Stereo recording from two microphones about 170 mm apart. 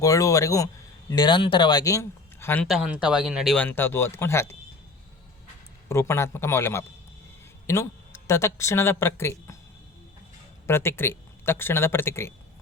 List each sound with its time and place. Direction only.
0.0 s speech: 20° left (ahead or behind)
2.6 s speech: centre (ahead or behind); by 4.5 s 15° left (ahead or behind)
5.9 s speech: 15° left (ahead or behind)
10.7 s speech: 15° left (ahead or behind)